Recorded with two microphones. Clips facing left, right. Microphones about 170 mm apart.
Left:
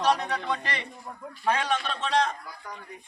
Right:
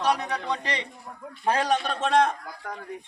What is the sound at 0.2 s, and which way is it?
Speech, 15° right (ahead or behind).